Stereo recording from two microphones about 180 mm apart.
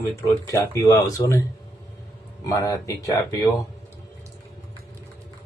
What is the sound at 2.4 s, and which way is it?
Speech, 20° left (ahead or behind).